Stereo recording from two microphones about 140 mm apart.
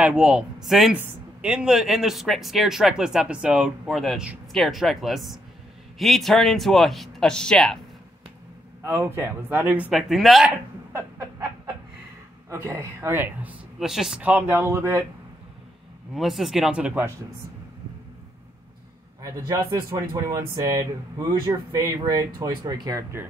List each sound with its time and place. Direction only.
0.0 s speech: 5° right (ahead or behind)
8.8 s speech: 15° right (ahead or behind); by 10.5 s centre (ahead or behind)
10.9 s chicken: 20° right (ahead or behind)
12.4 s speech: 20° right (ahead or behind); by 14.3 s 5° right (ahead or behind)
14.3 s speech: 15° right (ahead or behind)
16.2 s speech: centre (ahead or behind)
19.4 s speech: 20° right (ahead or behind)